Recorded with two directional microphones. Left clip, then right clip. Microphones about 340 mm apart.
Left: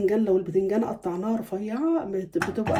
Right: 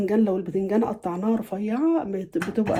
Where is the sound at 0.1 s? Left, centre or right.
Centre.